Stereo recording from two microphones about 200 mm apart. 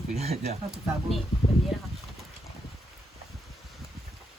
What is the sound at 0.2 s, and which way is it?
Speech, 30° right (ahead or behind).